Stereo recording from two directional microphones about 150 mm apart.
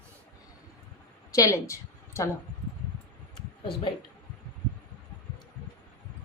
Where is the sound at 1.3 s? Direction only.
20° left (ahead or behind).